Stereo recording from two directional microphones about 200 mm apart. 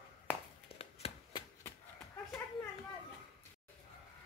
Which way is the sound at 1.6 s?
10° left (ahead or behind).